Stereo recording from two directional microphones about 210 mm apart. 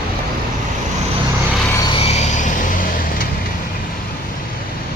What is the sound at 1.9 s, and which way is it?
Vehicle, 25° left (ahead or behind).